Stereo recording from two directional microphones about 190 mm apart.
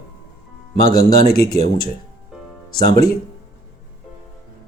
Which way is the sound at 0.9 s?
50° left (ahead or behind).